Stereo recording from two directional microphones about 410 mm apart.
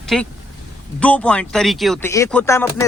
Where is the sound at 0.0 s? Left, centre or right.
Centre.